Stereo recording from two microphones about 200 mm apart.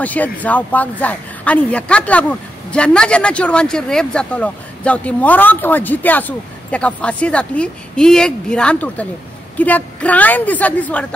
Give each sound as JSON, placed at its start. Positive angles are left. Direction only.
{"t": 0.0, "sound": "a woman's voice", "side_deg": 10}